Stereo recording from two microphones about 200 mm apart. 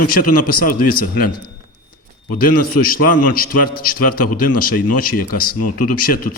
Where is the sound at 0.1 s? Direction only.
45° left (ahead or behind).